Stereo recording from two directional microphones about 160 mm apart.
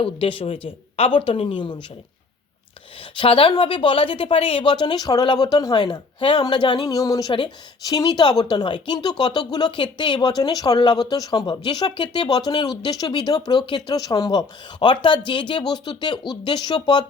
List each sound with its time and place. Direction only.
0.0 s speech: 35° left (ahead or behind)
3.0 s a woman's voice: 35° left (ahead or behind)